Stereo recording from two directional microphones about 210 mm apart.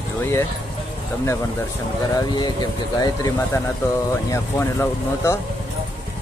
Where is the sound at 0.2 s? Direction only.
10° left (ahead or behind).